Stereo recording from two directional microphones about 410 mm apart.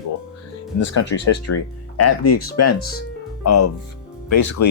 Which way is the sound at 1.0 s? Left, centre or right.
Left.